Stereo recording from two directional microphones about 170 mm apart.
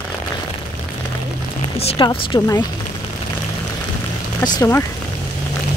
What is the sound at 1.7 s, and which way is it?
Speech, 35° left (ahead or behind).